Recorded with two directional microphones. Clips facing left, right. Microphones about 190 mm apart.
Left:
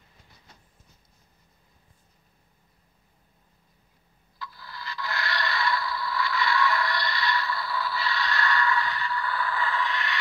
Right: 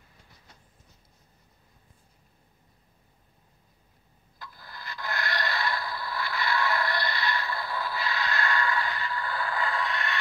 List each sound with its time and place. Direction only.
4.4 s scrape: 50° right (ahead or behind)